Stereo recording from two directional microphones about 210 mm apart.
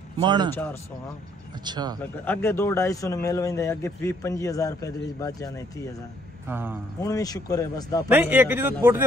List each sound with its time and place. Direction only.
0.2 s speech: 20° right (ahead or behind)
1.6 s speech: 20° right (ahead or behind)
2.0 s a man's voice: 5° left (ahead or behind)
6.4 s a man's voice: 10° right (ahead or behind)
7.0 s a man's voice: 15° left (ahead or behind)
8.1 s a man's voice: 10° right (ahead or behind)